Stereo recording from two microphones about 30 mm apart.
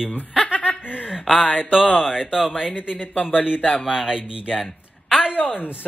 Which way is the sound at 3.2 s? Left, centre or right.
Left.